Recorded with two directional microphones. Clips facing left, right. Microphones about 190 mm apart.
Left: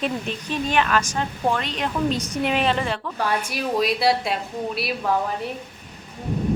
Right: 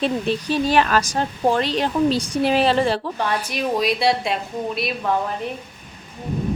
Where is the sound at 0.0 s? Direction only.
35° right (ahead or behind).